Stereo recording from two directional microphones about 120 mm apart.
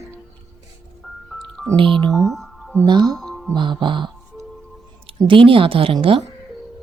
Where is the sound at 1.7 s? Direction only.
45° right (ahead or behind).